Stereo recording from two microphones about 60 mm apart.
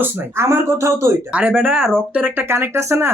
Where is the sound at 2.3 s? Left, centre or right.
Right.